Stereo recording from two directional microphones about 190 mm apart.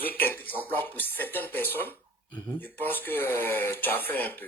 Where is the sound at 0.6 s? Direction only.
10° left (ahead or behind).